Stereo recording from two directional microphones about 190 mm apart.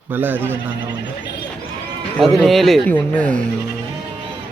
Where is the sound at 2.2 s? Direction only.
Centre (ahead or behind).